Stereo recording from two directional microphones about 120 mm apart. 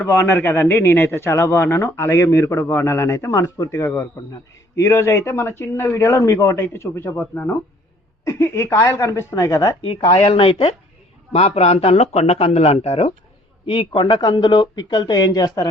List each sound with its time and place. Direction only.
0.0 s a man's voice: 20° left (ahead or behind)
10.1 s speech: 50° left (ahead or behind)